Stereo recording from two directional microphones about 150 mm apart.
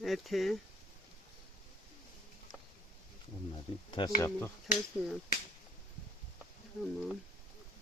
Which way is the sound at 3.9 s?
30° left (ahead or behind).